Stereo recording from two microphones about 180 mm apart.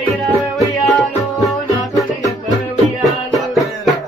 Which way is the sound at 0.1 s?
Centre (ahead or behind).